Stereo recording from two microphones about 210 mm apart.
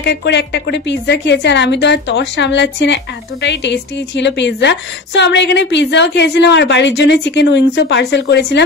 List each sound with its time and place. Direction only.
0.0 s a woman's voice: 55° left (ahead or behind)